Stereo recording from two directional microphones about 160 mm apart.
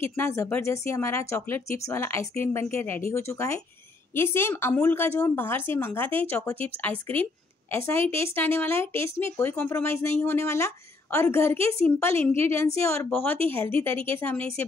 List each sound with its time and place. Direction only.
0.0 s speech: 15° left (ahead or behind)